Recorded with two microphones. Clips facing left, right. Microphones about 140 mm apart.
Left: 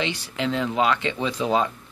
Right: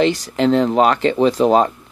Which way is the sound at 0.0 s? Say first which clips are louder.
Right 11 dB; 45° right (ahead or behind).